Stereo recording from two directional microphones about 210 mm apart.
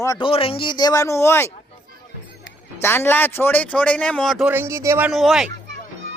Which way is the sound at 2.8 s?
10° left (ahead or behind).